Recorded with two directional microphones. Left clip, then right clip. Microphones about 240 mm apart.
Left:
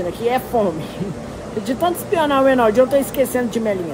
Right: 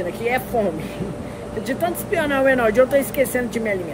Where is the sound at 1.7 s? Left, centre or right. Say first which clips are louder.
Left 3 dB; centre.